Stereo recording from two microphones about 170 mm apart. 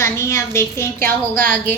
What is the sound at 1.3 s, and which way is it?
Speech, 55° right (ahead or behind).